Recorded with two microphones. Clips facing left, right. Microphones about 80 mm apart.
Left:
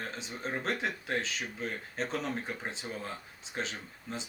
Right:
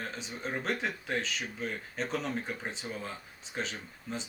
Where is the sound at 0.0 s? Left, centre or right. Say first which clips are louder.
Even; centre.